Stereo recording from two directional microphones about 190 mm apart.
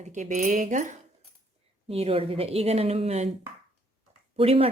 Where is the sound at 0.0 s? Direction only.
40° right (ahead or behind).